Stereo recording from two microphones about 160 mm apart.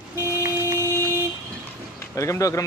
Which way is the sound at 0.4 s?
15° right (ahead or behind).